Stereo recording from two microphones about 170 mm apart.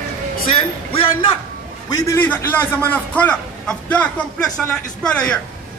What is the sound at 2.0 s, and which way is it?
A man's voice, 10° left (ahead or behind).